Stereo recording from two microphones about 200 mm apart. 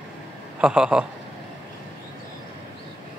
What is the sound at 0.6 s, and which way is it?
Speech, 5° right (ahead or behind).